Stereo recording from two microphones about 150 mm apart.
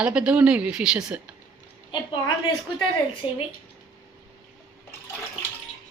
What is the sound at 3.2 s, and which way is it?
Speech, 35° left (ahead or behind).